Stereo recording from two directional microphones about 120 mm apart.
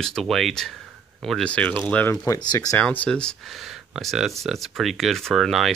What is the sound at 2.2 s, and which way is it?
Speech, 30° left (ahead or behind).